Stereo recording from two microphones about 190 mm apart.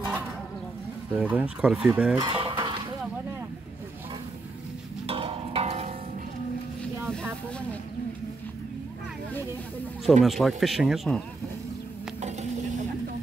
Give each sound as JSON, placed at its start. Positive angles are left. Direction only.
{"t": 1.1, "sound": "speech", "side_deg": -10}
{"t": 2.1, "sound": "chicken", "side_deg": -25}
{"t": 5.0, "sound": "music", "side_deg": -30}
{"t": 10.2, "sound": "speech", "side_deg": 0}
{"t": 12.2, "sound": "a sound", "side_deg": -35}